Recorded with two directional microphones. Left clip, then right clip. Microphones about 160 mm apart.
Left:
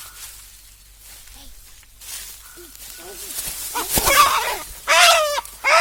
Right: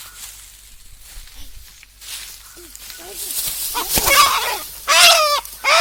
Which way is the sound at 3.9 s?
Centre (ahead or behind).